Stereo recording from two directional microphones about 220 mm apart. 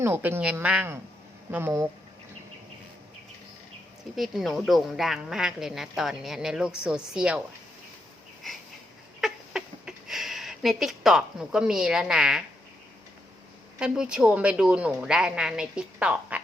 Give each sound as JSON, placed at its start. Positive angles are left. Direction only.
{"t": 0.0, "sound": "a woman's voice", "side_deg": -10}
{"t": 4.1, "sound": "speech", "side_deg": 0}
{"t": 9.2, "sound": "a sound", "side_deg": -5}
{"t": 13.7, "sound": "speech", "side_deg": -5}